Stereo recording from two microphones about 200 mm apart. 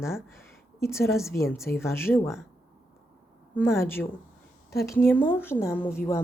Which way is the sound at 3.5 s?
10° left (ahead or behind).